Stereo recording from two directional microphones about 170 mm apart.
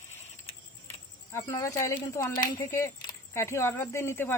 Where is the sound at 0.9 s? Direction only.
20° left (ahead or behind).